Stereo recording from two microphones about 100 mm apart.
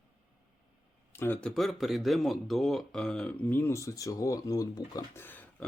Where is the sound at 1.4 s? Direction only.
5° left (ahead or behind).